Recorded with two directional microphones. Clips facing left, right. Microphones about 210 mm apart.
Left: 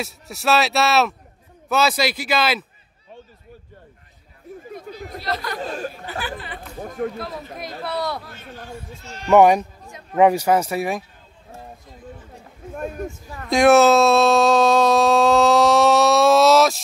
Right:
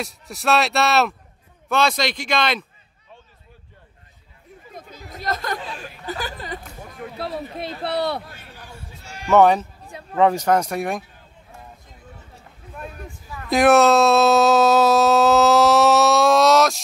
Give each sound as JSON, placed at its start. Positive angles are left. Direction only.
{"t": 0.0, "sound": "speech", "side_deg": 0}
{"t": 5.2, "sound": "speech", "side_deg": -45}
{"t": 5.6, "sound": "chatter", "side_deg": 45}
{"t": 6.0, "sound": "chatter", "side_deg": -40}
{"t": 6.8, "sound": "a sound", "side_deg": 45}
{"t": 7.2, "sound": "speech", "side_deg": -30}
{"t": 9.0, "sound": "speech", "side_deg": -10}
{"t": 9.3, "sound": "speech", "side_deg": 15}
{"t": 12.7, "sound": "a sound", "side_deg": 45}
{"t": 13.5, "sound": "speech", "side_deg": 0}